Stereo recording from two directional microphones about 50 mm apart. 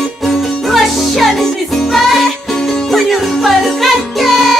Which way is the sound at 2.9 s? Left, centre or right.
Centre.